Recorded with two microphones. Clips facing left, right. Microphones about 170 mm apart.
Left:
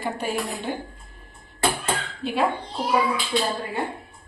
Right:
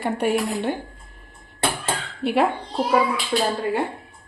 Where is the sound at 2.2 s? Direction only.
65° right (ahead or behind).